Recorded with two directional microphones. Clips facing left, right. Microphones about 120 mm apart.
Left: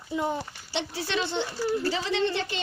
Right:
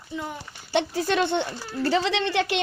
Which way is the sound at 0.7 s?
50° right (ahead or behind).